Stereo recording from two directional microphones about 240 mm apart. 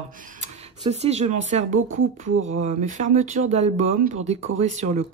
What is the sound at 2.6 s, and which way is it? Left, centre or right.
Speech, right.